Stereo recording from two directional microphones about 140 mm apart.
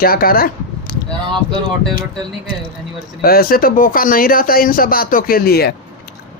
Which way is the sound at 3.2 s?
90° left.